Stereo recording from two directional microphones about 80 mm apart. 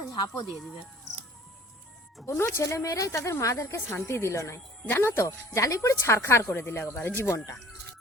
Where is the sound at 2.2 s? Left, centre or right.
Left.